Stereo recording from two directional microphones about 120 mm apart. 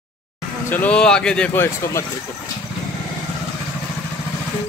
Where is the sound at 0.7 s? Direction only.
15° left (ahead or behind).